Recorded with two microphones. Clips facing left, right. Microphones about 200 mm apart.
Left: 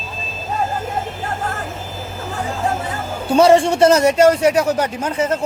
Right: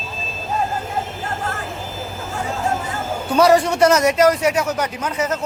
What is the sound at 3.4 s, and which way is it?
Speech, 25° left (ahead or behind).